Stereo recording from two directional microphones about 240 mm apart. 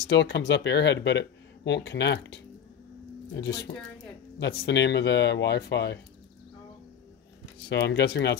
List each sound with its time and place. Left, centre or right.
0.1 s speech: left
7.7 s speech: left